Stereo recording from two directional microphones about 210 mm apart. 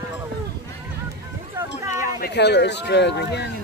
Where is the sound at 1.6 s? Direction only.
10° right (ahead or behind).